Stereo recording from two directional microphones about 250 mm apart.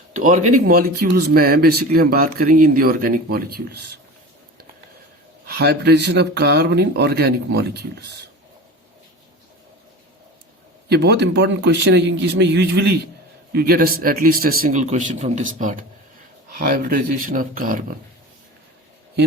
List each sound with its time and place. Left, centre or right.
0.1 s speech: right
5.5 s speech: right
10.8 s a man's voice: right